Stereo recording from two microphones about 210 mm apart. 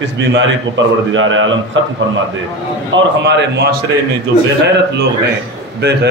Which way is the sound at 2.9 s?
55° right (ahead or behind).